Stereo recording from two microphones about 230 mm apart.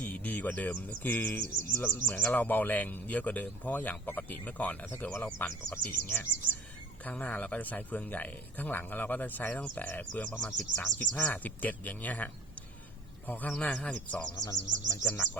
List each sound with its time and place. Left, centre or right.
0.0 s speech: centre
1.5 s speech: right
2.0 s a man's voice: centre